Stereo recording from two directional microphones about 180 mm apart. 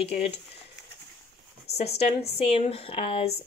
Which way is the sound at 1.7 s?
35° left (ahead or behind).